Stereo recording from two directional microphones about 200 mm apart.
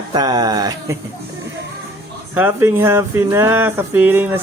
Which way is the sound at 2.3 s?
10° right (ahead or behind).